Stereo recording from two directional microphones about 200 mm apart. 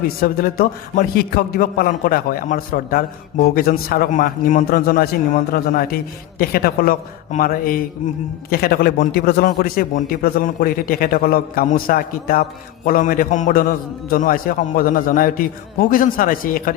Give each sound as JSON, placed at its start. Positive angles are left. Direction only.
{"t": 0.2, "sound": "a man's voice", "side_deg": 50}